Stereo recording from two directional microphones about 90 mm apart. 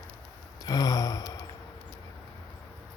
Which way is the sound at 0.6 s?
45° left (ahead or behind).